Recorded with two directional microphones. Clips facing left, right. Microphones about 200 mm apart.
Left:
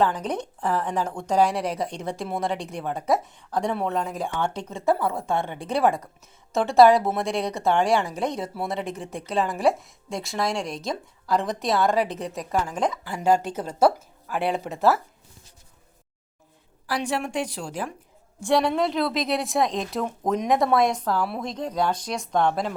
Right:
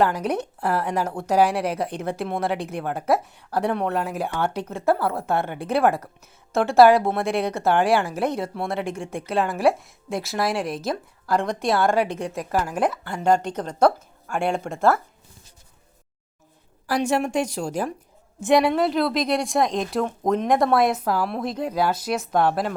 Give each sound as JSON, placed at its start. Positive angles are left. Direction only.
{"t": 0.0, "sound": "a woman's voice", "side_deg": -10}
{"t": 13.1, "sound": "a woman's voice", "side_deg": 5}
{"t": 16.8, "sound": "a woman's voice", "side_deg": -45}
{"t": 18.3, "sound": "a woman's voice", "side_deg": -20}
{"t": 18.7, "sound": "a woman's voice", "side_deg": 0}
{"t": 21.2, "sound": "a woman's voice", "side_deg": 5}
{"t": 21.5, "sound": "speech", "side_deg": -10}